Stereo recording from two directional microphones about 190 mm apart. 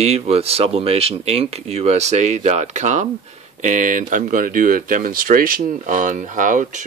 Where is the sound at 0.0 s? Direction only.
30° right (ahead or behind).